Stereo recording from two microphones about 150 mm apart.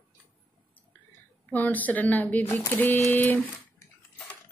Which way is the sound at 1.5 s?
10° left (ahead or behind).